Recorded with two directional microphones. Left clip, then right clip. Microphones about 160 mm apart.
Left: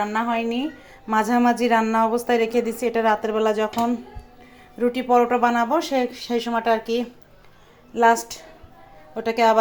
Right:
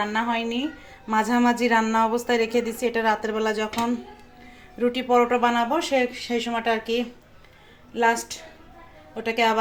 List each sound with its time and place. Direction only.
0.0 s a woman's voice: 10° left (ahead or behind)
4.8 s a woman's voice: 10° left (ahead or behind)